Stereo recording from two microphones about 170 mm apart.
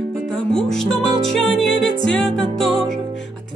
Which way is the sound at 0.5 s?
5° left (ahead or behind).